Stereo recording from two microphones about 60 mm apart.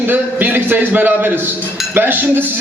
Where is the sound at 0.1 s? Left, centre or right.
Right.